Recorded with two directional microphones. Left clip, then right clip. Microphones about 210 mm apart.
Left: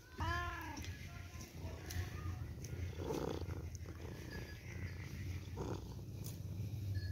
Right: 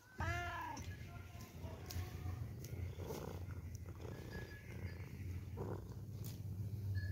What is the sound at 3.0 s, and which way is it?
Roaring cats, 25° left (ahead or behind).